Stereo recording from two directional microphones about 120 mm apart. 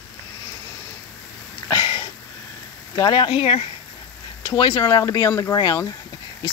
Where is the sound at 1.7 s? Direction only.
35° left (ahead or behind).